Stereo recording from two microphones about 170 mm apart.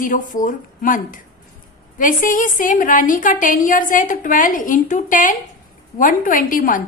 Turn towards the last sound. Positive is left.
turn(degrees=50)  # may be behind; listen again after turning